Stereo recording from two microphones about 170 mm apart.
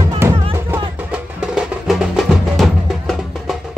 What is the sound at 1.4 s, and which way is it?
Music, 5° right (ahead or behind).